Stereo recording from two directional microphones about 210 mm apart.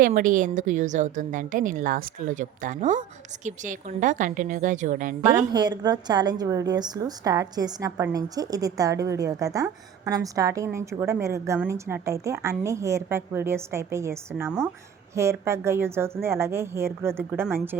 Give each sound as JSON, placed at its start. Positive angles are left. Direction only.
{"t": 0.0, "sound": "a woman's voice", "side_deg": -40}
{"t": 5.5, "sound": "a woman's voice", "side_deg": -20}